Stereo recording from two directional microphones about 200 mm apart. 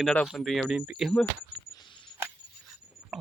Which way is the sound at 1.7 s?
20° left (ahead or behind).